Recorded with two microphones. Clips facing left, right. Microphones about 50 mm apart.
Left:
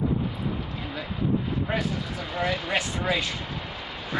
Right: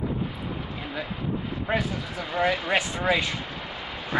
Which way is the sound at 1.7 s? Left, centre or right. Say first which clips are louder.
Right 1 dB; centre.